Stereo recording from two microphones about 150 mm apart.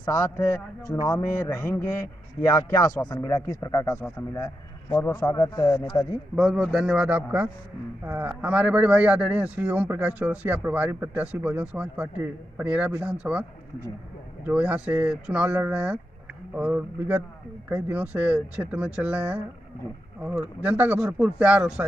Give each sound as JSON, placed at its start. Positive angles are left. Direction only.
{"t": 0.0, "sound": "a man's voice", "side_deg": 20}
{"t": 5.0, "sound": "a man's voice", "side_deg": 20}
{"t": 6.3, "sound": "a man's voice", "side_deg": 0}